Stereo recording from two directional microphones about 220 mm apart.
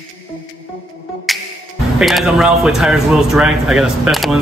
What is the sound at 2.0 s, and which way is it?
A man's voice, centre (ahead or behind).